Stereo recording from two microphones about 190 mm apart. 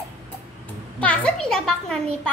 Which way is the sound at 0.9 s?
5° left (ahead or behind).